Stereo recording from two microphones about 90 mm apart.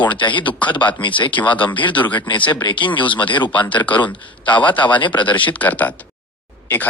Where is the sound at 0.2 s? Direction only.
65° left (ahead or behind).